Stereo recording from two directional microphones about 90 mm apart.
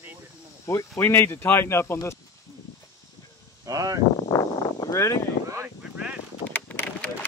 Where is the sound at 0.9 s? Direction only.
25° left (ahead or behind).